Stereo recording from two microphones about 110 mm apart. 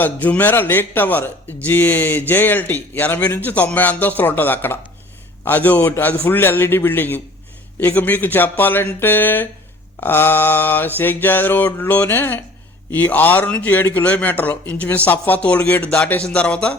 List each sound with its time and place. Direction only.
0.0 s a man's voice: 15° left (ahead or behind)